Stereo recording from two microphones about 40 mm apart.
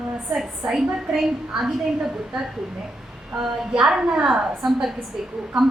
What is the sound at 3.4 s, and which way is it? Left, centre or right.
A woman's voice, centre.